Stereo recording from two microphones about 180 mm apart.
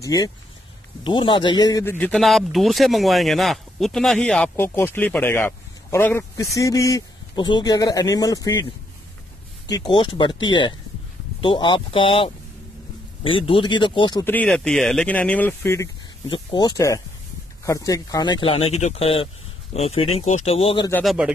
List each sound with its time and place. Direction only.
0.0 s a man's voice: 20° left (ahead or behind)
14.2 s a man's voice: 10° left (ahead or behind); by 20.9 s 30° left (ahead or behind)
21.0 s speech: centre (ahead or behind)